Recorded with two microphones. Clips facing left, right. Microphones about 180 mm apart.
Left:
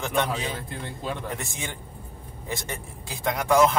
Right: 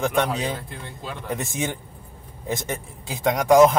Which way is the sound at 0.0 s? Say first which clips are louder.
Right 4 dB; 20° right (ahead or behind).